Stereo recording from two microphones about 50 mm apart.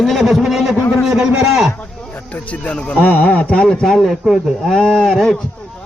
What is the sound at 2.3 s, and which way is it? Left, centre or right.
A man's voice, left.